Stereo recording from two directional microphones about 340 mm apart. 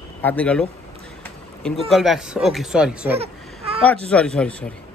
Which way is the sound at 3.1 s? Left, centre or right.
Centre.